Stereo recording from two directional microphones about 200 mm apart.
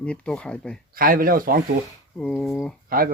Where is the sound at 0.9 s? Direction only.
45° right (ahead or behind).